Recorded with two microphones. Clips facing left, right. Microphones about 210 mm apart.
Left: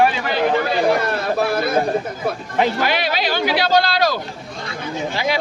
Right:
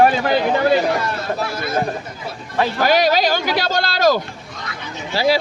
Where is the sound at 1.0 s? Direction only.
55° left (ahead or behind).